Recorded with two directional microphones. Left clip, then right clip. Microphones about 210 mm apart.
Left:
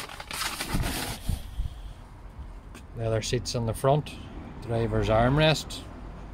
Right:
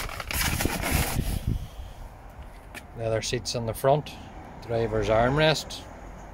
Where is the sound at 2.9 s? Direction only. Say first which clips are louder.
Right 1 dB; 5° left (ahead or behind).